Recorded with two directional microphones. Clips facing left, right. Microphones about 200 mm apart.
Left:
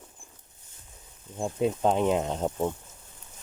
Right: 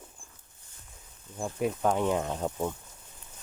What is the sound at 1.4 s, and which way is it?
Speech, 25° left (ahead or behind).